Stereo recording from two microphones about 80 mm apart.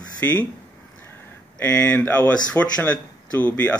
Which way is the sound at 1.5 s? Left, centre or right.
Centre.